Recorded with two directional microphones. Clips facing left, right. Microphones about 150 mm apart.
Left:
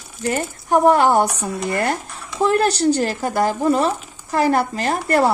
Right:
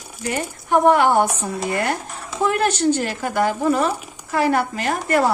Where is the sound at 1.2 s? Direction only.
25° right (ahead or behind).